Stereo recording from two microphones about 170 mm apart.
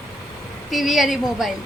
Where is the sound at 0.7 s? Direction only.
Centre (ahead or behind).